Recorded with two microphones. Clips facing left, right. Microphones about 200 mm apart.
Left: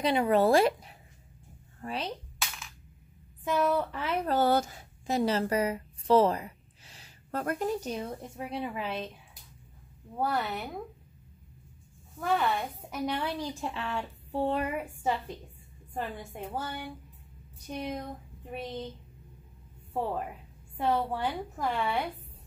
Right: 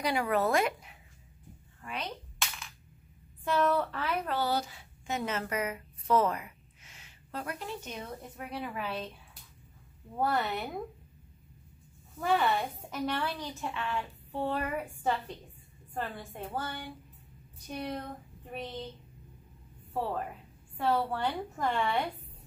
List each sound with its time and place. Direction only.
0.0 s a woman's voice: 25° left (ahead or behind)
2.3 s a sound: centre (ahead or behind)
3.4 s a woman's voice: 10° left (ahead or behind)
4.0 s a woman's voice: 25° left (ahead or behind)
4.3 s a woman's voice: 50° left (ahead or behind); by 7.1 s 35° left (ahead or behind)
7.2 s a woman's voice: 50° left (ahead or behind); by 9.1 s 20° left (ahead or behind)
10.1 s speech: centre (ahead or behind)
12.2 s speech: centre (ahead or behind)
12.9 s a woman's voice: 20° left (ahead or behind)
14.8 s a woman's voice: 10° left (ahead or behind)
17.7 s child singing: 10° left (ahead or behind)
19.9 s a woman's voice: 15° left (ahead or behind)